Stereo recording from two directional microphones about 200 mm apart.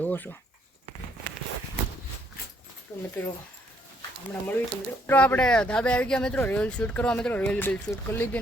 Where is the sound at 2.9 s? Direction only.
15° left (ahead or behind).